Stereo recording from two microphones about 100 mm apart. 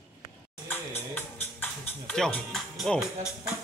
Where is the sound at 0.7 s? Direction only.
20° left (ahead or behind).